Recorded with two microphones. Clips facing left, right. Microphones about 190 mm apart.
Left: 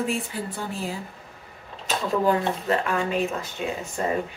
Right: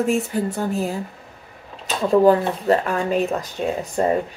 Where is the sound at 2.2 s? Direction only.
35° right (ahead or behind).